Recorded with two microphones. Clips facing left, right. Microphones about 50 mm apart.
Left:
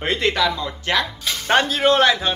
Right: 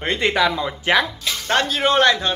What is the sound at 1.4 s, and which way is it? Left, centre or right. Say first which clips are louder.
Speech: left 2 dB; centre.